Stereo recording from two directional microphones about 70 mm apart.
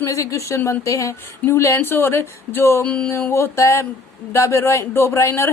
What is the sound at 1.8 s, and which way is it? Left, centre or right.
A woman's voice, left.